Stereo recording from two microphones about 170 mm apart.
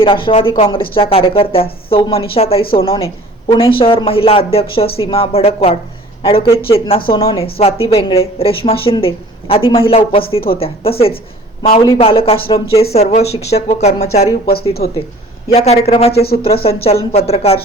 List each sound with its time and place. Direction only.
0.0 s speech: 30° left (ahead or behind)
15.5 s speech: 40° left (ahead or behind)
16.2 s speech: 60° left (ahead or behind)
16.6 s speech: 35° left (ahead or behind)